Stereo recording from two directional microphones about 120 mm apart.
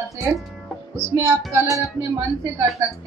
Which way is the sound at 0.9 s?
20° right (ahead or behind).